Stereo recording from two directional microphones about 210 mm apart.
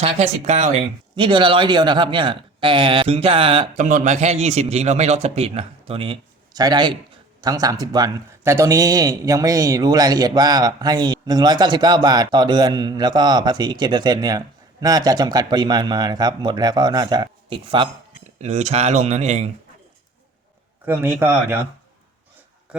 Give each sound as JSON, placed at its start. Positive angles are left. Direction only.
{"t": 0.0, "sound": "a man's voice", "side_deg": -30}
{"t": 20.8, "sound": "speech", "side_deg": -10}